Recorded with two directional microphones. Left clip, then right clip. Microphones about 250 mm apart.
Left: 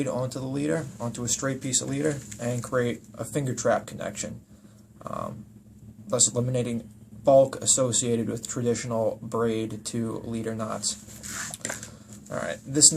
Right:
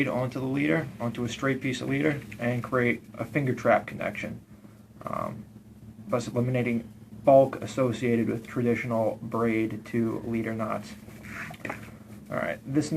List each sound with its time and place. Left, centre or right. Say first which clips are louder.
0.0 s speech: right 1 dB; centre
12.3 s speech: right 1 dB; centre